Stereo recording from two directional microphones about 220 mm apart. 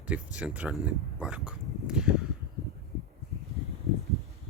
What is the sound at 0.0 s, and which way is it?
Speech, 5° right (ahead or behind).